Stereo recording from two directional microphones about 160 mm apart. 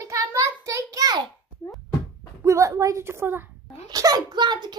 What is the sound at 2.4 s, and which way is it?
A child's voice, 20° right (ahead or behind).